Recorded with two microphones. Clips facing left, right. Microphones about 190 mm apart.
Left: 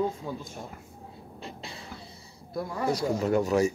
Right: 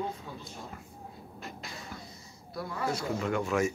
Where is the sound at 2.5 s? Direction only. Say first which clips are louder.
Left 5 dB; 35° left (ahead or behind).